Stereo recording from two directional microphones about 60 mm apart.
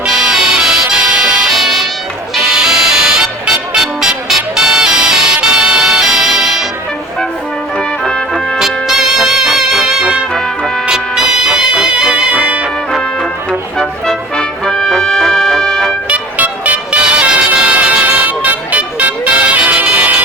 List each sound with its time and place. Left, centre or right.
0.0 s music: centre
7.8 s music: centre
8.5 s brass instrument: centre
10.8 s music: centre
13.5 s music: centre
16.0 s music: right